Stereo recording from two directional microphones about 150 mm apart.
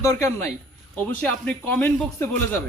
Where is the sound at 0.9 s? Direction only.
10° left (ahead or behind).